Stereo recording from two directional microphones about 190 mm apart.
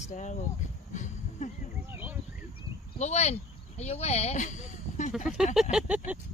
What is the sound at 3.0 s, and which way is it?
Speech, 35° left (ahead or behind).